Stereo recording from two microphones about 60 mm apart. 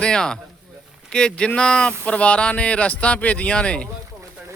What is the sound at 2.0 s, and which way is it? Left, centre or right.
Speech, centre.